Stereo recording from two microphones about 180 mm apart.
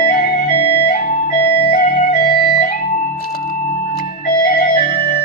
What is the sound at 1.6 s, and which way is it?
Music, 55° left (ahead or behind).